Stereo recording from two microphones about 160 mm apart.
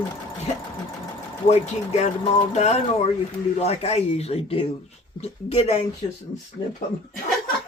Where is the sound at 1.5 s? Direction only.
45° left (ahead or behind).